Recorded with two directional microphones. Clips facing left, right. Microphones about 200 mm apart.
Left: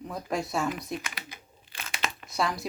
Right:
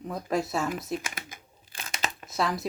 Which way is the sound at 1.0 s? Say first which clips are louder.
Right 2 dB; 50° right (ahead or behind).